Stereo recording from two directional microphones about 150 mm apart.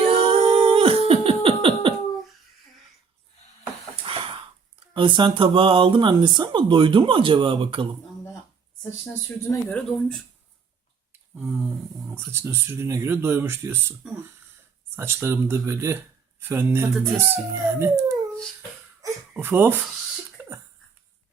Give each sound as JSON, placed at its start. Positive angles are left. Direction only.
{"t": 0.3, "sound": "a sound", "side_deg": -40}
{"t": 4.1, "sound": "gasp", "side_deg": -40}
{"t": 4.9, "sound": "speech", "side_deg": -30}
{"t": 9.6, "sound": "speech", "side_deg": 10}
{"t": 11.1, "sound": "a sound", "side_deg": -15}
{"t": 12.0, "sound": "speech", "side_deg": -15}
{"t": 14.9, "sound": "speech", "side_deg": -15}
{"t": 19.3, "sound": "speech", "side_deg": -15}
{"t": 20.4, "sound": "a sound", "side_deg": -15}